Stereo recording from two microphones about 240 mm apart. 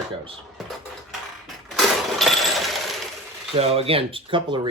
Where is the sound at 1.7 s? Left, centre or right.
Centre.